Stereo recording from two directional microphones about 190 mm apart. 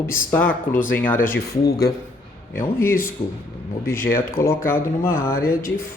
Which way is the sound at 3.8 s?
10° left (ahead or behind).